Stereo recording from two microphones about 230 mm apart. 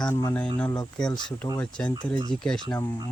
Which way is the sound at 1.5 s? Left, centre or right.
Centre.